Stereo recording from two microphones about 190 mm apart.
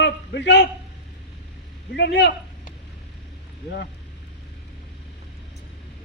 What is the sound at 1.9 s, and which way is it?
Speech, 60° left (ahead or behind).